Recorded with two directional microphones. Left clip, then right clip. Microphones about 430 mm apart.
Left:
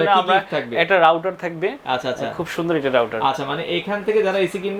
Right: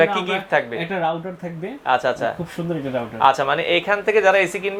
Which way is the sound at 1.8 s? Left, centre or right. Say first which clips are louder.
Right 9 dB; right.